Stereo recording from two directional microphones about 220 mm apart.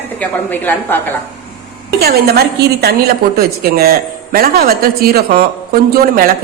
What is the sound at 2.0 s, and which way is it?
A woman's voice, 45° right (ahead or behind).